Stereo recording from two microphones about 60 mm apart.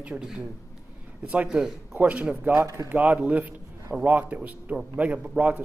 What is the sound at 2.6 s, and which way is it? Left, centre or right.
Speech, right.